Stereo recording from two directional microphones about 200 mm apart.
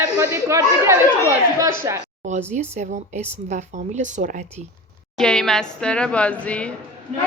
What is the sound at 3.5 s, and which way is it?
Speech, 35° right (ahead or behind).